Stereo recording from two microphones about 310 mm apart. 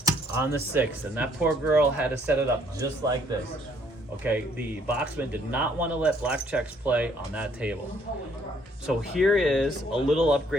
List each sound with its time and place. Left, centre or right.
0.0 s speech: centre
4.2 s speech: centre
8.9 s speech: centre